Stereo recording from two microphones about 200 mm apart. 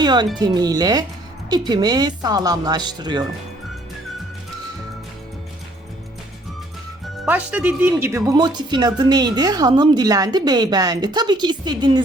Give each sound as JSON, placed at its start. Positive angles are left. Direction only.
{"t": 0.0, "sound": "speech", "side_deg": -20}
{"t": 7.3, "sound": "speech", "side_deg": -10}